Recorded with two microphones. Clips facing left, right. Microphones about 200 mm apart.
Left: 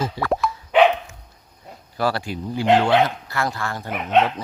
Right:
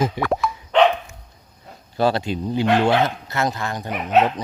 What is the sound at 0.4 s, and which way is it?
Dog, 5° left (ahead or behind).